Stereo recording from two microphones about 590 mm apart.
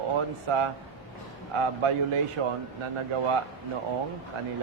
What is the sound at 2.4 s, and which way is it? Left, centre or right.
Speech, right.